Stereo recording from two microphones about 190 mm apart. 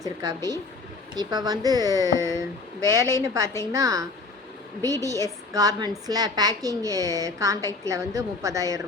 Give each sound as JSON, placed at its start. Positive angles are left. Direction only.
{"t": 0.0, "sound": "a woman's voice", "side_deg": -15}